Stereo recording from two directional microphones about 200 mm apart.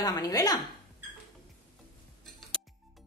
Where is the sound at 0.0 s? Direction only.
20° left (ahead or behind).